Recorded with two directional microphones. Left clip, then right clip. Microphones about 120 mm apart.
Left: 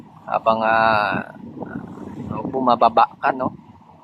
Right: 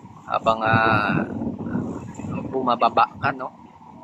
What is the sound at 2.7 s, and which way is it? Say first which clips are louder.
Speech: left 4 dB; 40° left (ahead or behind).